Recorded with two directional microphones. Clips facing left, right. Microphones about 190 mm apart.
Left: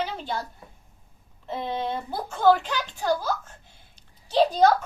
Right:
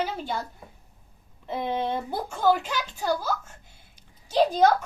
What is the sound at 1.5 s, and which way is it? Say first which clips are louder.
Speech: right 1 dB; 10° right (ahead or behind).